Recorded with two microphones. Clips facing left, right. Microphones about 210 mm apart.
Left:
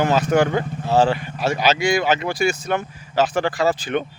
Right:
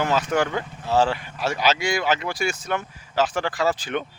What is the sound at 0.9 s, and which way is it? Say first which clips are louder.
Speech: left 3 dB; 55° left (ahead or behind).